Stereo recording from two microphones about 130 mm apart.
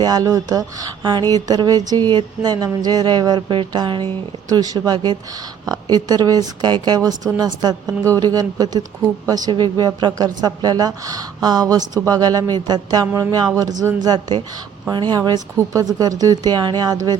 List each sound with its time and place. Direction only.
0.0 s a woman's voice: 30° right (ahead or behind)